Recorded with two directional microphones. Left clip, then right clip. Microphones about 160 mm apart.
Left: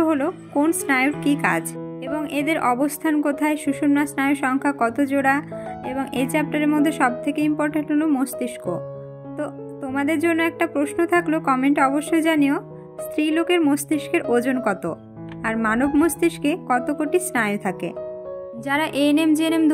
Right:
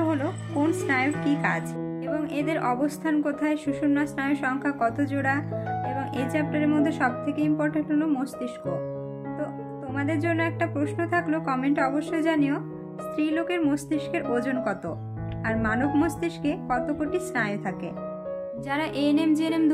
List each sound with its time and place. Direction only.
0.0 s a woman's voice: 30° left (ahead or behind)
9.9 s a woman's voice: 40° left (ahead or behind)
18.7 s music: 40° left (ahead or behind)